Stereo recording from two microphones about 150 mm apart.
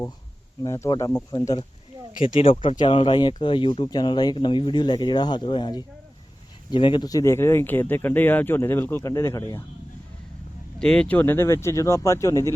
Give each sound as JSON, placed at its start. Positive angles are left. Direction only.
{"t": 0.6, "sound": "speech", "side_deg": 20}
{"t": 2.2, "sound": "speech", "side_deg": 40}
{"t": 10.8, "sound": "speech", "side_deg": 5}